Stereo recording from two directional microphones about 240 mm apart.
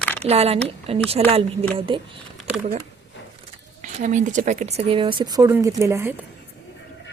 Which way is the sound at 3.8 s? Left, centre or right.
Right.